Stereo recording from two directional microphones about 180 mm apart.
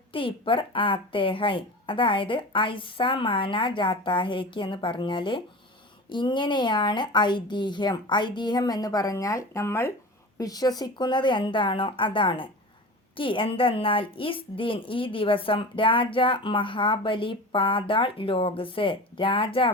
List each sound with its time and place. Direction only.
0.1 s a woman's voice: 30° left (ahead or behind)